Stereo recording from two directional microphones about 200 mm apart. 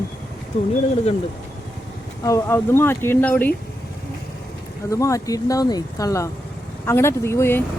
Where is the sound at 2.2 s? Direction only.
15° left (ahead or behind).